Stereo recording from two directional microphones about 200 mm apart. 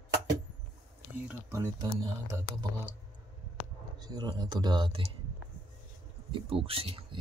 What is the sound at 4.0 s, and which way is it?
Speech, 20° right (ahead or behind).